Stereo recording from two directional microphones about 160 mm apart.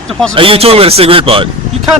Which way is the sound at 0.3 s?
35° right (ahead or behind).